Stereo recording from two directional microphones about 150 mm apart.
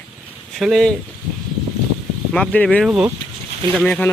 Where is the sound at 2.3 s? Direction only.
5° left (ahead or behind).